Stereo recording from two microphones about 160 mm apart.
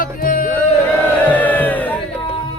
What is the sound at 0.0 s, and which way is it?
Music, 60° left (ahead or behind).